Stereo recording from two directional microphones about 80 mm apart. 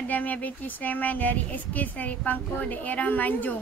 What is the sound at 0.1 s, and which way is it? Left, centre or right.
Speech, centre.